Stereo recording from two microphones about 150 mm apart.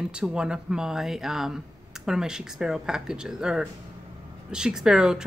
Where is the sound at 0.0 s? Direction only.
5° right (ahead or behind).